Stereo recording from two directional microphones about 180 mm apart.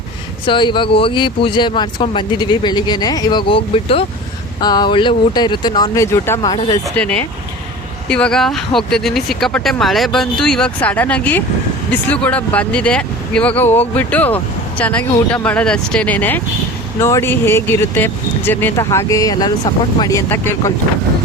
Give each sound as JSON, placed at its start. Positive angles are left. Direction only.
{"t": 0.4, "sound": "speech", "side_deg": 25}